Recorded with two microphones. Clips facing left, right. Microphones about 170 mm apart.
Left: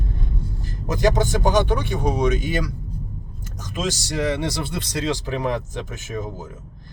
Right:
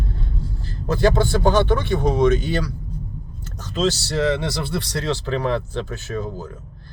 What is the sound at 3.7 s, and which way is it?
Speech, 15° left (ahead or behind).